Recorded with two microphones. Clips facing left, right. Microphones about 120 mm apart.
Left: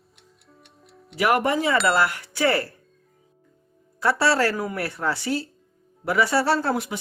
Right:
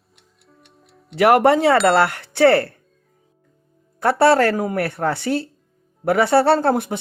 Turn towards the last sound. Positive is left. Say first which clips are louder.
# right 6 dB
turn(degrees=-55)  # may be behind; listen again after turning